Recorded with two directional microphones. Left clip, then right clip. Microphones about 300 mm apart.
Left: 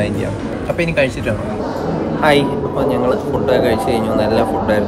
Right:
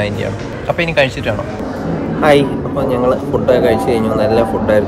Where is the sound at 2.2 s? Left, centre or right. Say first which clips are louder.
Right 3 dB; centre.